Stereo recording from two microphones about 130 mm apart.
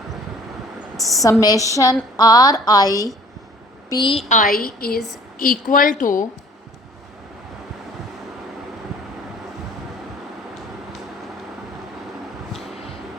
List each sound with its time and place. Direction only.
0.9 s speech: centre (ahead or behind)
1.2 s a woman's voice: 25° left (ahead or behind)
4.3 s a woman's voice: 85° left